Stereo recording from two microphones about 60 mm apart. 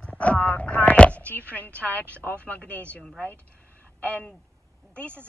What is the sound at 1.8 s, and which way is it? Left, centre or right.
Speech, left.